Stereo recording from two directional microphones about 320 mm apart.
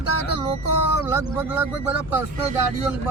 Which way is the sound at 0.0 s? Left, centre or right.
Left.